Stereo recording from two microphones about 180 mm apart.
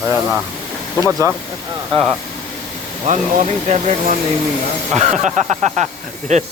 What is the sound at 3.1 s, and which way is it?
Speech, 40° right (ahead or behind).